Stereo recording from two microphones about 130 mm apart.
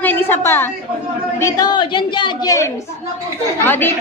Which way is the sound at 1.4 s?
30° left (ahead or behind).